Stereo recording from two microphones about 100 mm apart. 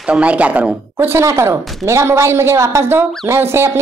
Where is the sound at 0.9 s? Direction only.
25° right (ahead or behind).